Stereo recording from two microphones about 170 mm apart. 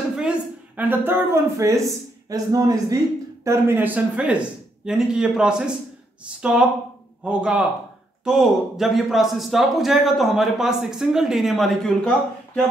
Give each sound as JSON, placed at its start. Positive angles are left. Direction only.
{"t": 0.1, "sound": "a woman's voice", "side_deg": -5}